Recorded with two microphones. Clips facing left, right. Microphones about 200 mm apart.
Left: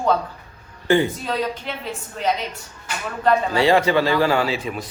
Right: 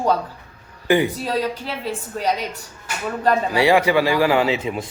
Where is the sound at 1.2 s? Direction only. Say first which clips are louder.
Right 2 dB; 35° right (ahead or behind).